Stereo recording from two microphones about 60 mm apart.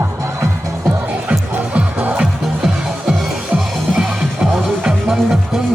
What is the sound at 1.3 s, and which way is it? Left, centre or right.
Music, right.